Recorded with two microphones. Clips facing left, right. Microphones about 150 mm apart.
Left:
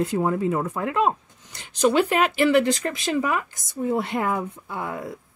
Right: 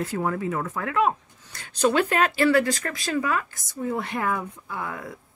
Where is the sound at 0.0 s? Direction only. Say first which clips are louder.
Left 4 dB; 25° left (ahead or behind).